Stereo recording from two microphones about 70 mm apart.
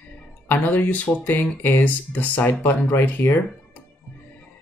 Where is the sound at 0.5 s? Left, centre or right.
Left.